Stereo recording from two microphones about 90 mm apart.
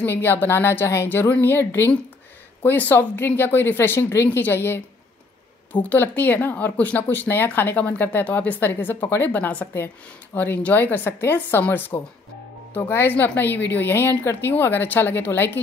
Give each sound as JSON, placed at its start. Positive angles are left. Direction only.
{"t": 0.0, "sound": "speech", "side_deg": 25}